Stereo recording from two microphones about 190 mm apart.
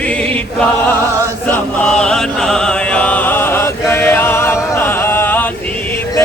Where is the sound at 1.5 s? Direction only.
5° left (ahead or behind).